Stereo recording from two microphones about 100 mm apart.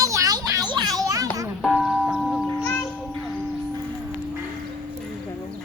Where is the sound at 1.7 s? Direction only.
5° right (ahead or behind).